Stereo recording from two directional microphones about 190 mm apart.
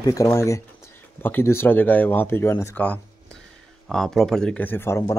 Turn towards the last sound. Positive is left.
turn(degrees=15)  # may be behind; listen again after turning